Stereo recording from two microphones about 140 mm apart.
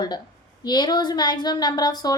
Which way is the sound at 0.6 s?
30° left (ahead or behind).